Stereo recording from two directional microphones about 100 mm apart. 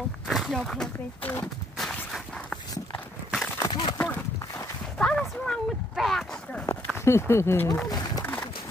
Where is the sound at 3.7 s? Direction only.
50° left (ahead or behind).